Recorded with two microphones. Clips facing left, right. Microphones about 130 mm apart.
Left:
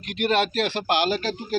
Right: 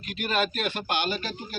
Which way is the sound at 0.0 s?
65° left (ahead or behind).